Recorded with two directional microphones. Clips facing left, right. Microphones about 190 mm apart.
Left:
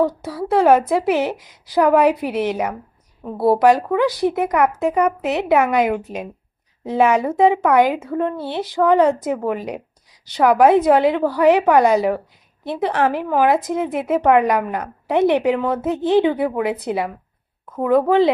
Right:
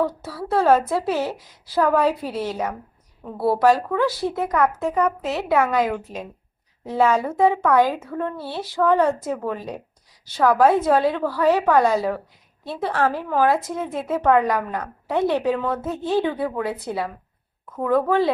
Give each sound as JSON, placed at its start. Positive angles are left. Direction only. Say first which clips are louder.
{"t": 0.0, "sound": "speech", "louder": "left 5 dB", "side_deg": 15}